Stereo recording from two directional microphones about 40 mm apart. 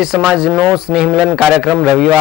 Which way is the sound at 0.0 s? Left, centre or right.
Centre.